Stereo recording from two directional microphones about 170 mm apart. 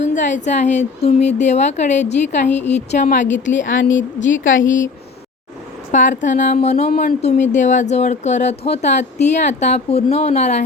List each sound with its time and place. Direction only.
0.0 s speech: 45° left (ahead or behind)
4.3 s a woman's voice: 90° left
5.9 s speech: 45° left (ahead or behind)